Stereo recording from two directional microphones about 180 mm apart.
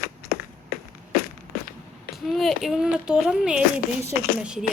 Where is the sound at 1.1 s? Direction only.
55° left (ahead or behind).